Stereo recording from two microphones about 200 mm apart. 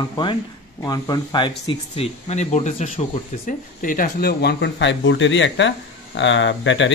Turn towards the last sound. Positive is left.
turn(degrees=65)  # may be behind; listen again after turning